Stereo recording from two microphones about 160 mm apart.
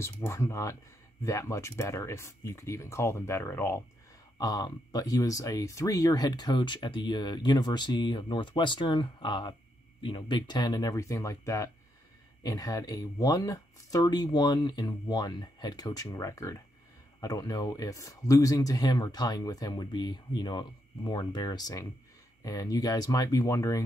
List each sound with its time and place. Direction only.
0.0 s speech: 15° left (ahead or behind)